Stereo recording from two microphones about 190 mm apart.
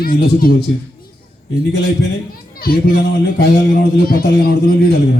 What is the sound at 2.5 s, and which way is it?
A man's voice, 50° left (ahead or behind).